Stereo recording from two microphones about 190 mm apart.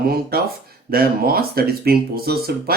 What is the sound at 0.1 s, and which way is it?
Speech, 55° right (ahead or behind).